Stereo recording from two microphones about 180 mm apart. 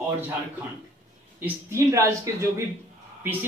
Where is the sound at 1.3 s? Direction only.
15° right (ahead or behind).